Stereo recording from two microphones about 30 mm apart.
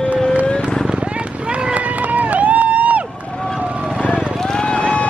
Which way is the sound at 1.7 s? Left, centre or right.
Right.